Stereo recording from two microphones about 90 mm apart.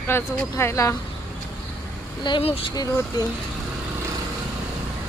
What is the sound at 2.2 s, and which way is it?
Speech, 75° left (ahead or behind).